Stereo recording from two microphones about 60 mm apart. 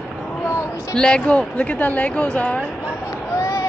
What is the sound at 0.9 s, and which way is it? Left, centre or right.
Speech, centre.